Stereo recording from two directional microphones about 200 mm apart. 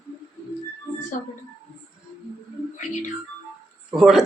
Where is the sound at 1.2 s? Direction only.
40° left (ahead or behind).